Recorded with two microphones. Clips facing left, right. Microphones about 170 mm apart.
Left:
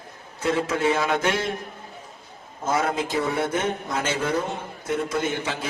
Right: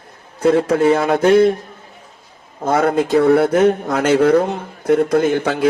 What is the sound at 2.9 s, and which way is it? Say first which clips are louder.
Speech: right 12 dB; 65° right (ahead or behind).